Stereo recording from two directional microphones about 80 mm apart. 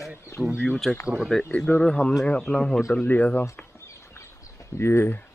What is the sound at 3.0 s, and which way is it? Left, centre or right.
Speech, left.